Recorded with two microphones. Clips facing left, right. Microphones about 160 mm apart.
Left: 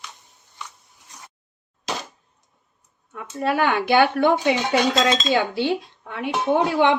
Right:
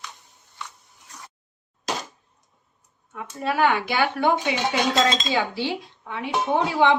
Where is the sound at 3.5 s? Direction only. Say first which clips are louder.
Left 3 dB; 60° left (ahead or behind).